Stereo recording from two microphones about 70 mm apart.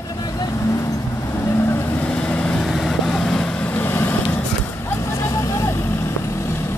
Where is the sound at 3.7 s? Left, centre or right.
Left.